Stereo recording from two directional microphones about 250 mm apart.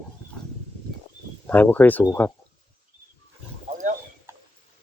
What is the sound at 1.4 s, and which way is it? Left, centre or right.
Speech, centre.